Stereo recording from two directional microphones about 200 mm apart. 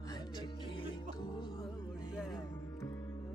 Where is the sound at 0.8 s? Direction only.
25° left (ahead or behind).